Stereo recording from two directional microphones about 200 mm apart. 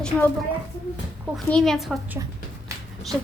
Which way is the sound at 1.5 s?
5° left (ahead or behind).